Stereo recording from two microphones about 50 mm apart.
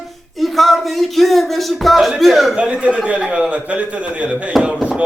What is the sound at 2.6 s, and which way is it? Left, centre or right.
Speech, right.